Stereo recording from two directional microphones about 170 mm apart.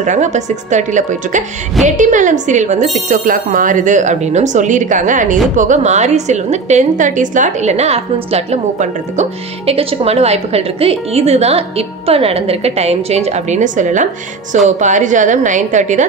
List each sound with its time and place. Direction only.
0.0 s a woman's voice: 45° right (ahead or behind)